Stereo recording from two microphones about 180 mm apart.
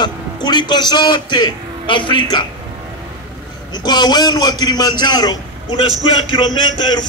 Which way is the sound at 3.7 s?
25° left (ahead or behind).